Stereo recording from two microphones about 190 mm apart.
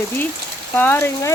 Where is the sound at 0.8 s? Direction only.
10° left (ahead or behind).